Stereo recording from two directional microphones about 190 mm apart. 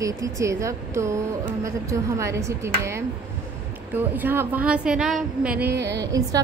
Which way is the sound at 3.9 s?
10° right (ahead or behind).